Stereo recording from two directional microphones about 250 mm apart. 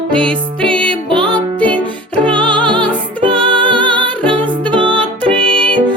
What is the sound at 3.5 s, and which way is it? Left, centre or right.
Music, centre.